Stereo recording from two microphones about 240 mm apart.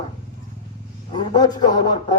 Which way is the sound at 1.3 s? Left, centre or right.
Centre.